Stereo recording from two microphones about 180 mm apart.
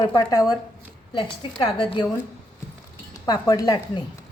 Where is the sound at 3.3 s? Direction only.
20° left (ahead or behind).